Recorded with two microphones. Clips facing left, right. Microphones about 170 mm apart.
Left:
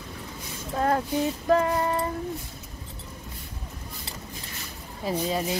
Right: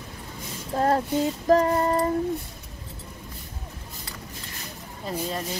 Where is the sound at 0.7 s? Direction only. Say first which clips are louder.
Right 2 dB; 30° right (ahead or behind).